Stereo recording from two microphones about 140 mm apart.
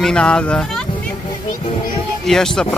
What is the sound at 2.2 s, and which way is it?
Speech, 5° left (ahead or behind).